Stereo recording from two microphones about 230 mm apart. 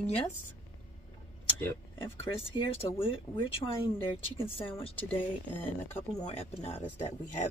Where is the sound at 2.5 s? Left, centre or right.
Left.